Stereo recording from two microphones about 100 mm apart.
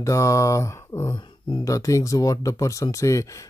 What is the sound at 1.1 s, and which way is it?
Speech, 55° left (ahead or behind).